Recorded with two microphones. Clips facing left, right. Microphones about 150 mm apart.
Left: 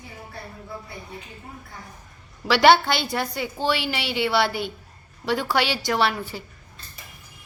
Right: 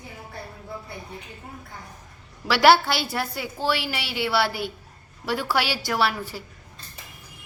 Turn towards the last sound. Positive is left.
turn(degrees=-5)  # may be behind; listen again after turning